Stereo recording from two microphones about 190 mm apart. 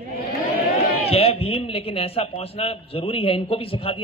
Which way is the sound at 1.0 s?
30° left (ahead or behind).